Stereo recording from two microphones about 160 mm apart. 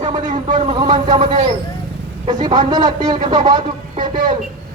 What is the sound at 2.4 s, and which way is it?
A man's voice, 25° right (ahead or behind).